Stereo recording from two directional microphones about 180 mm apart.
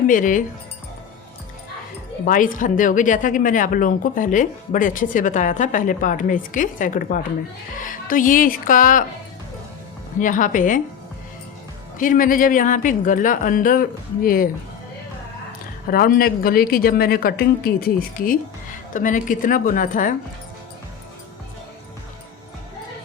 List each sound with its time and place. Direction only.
0.1 s speech: 45° left (ahead or behind)
2.2 s speech: 45° left (ahead or behind)
10.2 s speech: 45° left (ahead or behind)
11.9 s speech: 50° left (ahead or behind)
15.9 s speech: 55° left (ahead or behind)